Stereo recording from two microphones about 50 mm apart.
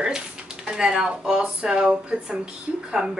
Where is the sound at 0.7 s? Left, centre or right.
Centre.